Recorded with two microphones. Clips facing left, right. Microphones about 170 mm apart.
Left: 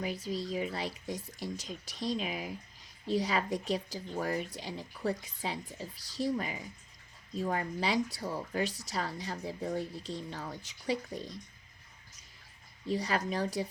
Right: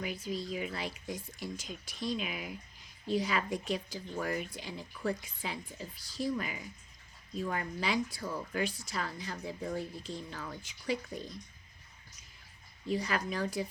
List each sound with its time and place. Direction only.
0.0 s a woman's voice: 35° left (ahead or behind)
12.9 s a woman's voice: 35° left (ahead or behind)